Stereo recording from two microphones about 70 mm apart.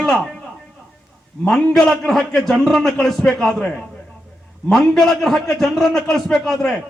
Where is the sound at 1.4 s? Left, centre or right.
Centre.